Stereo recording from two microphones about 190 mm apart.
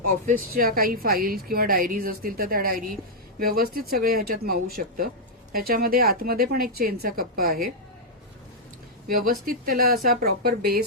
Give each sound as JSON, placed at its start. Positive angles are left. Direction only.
{"t": 0.3, "sound": "a woman's voice", "side_deg": -50}
{"t": 9.0, "sound": "a woman's voice", "side_deg": -50}